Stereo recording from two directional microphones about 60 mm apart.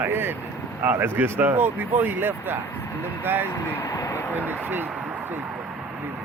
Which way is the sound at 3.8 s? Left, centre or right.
Left.